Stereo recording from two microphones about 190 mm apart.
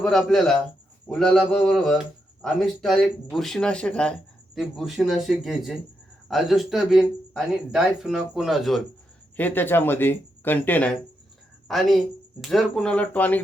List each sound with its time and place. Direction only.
0.0 s speech: centre (ahead or behind)
12.4 s speech: centre (ahead or behind)